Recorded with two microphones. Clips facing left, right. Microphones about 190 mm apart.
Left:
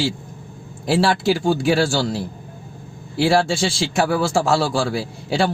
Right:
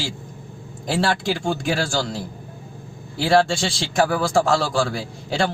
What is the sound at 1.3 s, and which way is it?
Speech, 35° left (ahead or behind).